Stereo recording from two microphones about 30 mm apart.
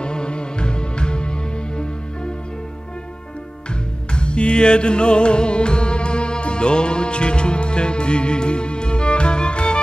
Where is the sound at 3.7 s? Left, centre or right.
Left.